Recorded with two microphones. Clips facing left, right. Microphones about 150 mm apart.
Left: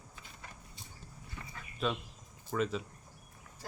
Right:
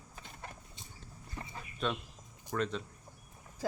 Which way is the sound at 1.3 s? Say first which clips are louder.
Right 4 dB; 25° right (ahead or behind).